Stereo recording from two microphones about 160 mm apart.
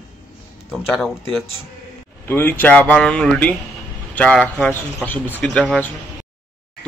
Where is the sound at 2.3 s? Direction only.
15° left (ahead or behind).